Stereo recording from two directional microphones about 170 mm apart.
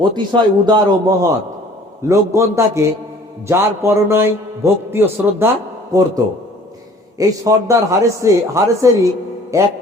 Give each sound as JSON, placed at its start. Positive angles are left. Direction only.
{"t": 0.0, "sound": "a man's voice", "side_deg": -25}
{"t": 7.2, "sound": "a man's voice", "side_deg": -20}